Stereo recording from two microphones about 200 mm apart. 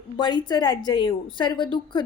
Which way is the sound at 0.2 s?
20° left (ahead or behind).